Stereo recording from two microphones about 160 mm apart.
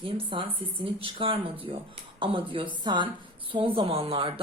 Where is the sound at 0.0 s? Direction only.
30° right (ahead or behind).